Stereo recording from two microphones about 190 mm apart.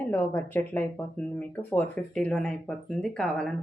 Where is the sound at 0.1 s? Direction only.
10° left (ahead or behind).